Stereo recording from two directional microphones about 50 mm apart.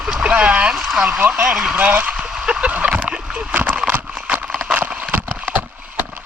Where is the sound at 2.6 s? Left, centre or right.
Right.